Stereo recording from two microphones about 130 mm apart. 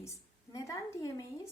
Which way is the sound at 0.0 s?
25° left (ahead or behind).